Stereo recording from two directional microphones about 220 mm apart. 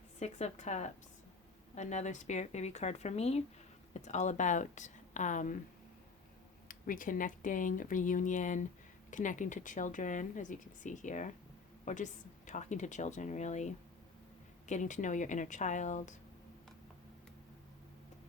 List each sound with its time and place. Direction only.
0.2 s speech: 30° left (ahead or behind)
6.7 s speech: 40° left (ahead or behind)